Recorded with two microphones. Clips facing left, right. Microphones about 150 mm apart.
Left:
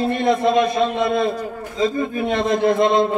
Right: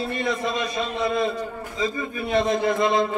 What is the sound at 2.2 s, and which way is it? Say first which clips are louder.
Speech: left 2 dB; 70° left (ahead or behind).